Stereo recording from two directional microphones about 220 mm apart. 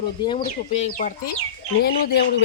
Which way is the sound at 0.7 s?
30° left (ahead or behind).